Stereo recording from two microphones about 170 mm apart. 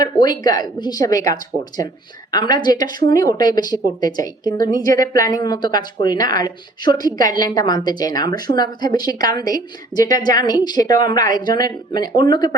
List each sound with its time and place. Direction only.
0.0 s a woman's voice: 25° left (ahead or behind)
4.6 s speech: 55° right (ahead or behind)
4.9 s a woman's voice: 20° left (ahead or behind)